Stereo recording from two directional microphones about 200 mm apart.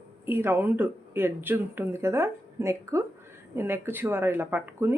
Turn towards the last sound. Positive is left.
turn(degrees=-10)  # may be behind; listen again after turning